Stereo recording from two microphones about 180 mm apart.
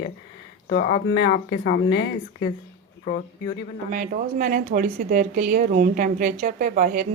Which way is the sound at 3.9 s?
45° right (ahead or behind).